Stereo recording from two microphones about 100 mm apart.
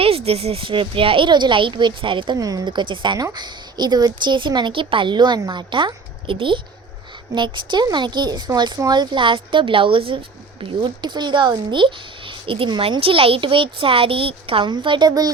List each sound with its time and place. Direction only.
0.0 s speech: 80° right; by 2.4 s 55° right (ahead or behind)
2.4 s a woman's voice: 35° right (ahead or behind); by 14.7 s 65° right (ahead or behind)
14.7 s a woman's voice: 55° right (ahead or behind)